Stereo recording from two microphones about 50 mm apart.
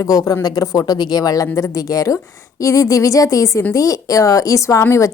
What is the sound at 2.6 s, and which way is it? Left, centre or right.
Speech, left.